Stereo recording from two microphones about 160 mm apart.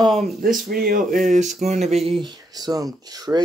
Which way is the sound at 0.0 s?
Centre (ahead or behind).